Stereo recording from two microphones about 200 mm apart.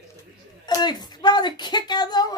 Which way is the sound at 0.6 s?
20° left (ahead or behind).